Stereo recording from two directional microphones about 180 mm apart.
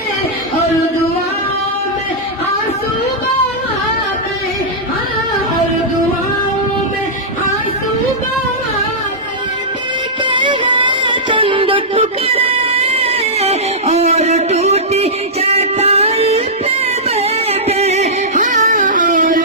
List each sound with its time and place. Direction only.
10.2 s music: 25° right (ahead or behind); by 19.4 s 45° right (ahead or behind)